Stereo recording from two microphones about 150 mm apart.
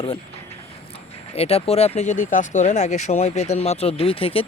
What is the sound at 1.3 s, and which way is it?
Speech, 40° left (ahead or behind).